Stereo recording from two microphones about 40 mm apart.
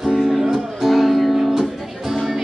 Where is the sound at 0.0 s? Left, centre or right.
Centre.